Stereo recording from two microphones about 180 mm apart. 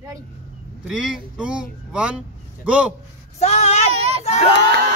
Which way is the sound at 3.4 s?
35° left (ahead or behind).